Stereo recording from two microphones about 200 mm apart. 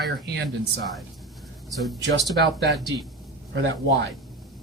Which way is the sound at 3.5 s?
60° right (ahead or behind).